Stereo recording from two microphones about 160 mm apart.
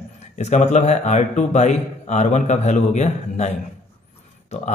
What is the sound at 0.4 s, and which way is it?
A man's voice, 45° left (ahead or behind).